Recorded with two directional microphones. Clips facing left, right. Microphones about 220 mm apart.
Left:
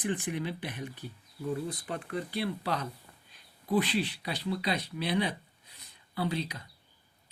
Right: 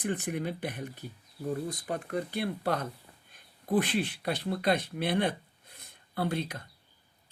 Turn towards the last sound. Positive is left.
turn(degrees=-50)  # may be behind; listen again after turning